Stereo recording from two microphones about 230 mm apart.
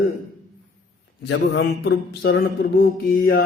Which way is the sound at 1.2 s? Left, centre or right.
Left.